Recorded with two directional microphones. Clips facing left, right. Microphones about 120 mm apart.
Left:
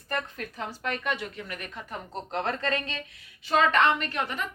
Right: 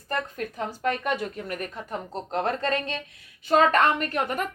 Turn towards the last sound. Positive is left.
turn(degrees=-50)  # may be behind; listen again after turning